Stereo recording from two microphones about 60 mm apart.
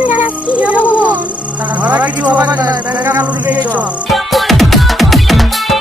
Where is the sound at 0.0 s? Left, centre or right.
Right.